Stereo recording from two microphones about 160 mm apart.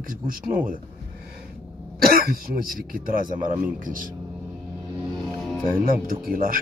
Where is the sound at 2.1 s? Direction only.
65° right (ahead or behind).